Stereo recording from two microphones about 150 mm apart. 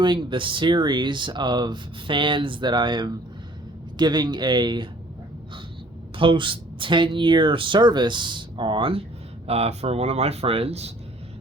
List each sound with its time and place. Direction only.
0.0 s speech: 30° right (ahead or behind)
6.1 s speech: 35° right (ahead or behind)